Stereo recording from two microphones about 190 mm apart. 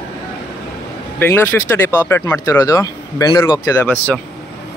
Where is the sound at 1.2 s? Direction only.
10° left (ahead or behind).